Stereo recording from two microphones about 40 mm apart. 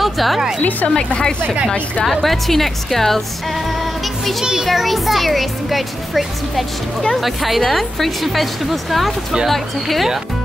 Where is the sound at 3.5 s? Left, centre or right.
Centre.